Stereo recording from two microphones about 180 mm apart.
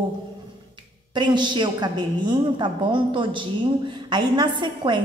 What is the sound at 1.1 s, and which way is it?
A woman's voice, 25° right (ahead or behind).